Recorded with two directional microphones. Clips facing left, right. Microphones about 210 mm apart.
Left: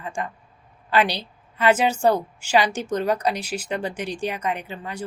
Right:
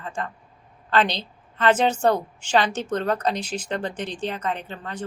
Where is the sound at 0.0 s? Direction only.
10° left (ahead or behind).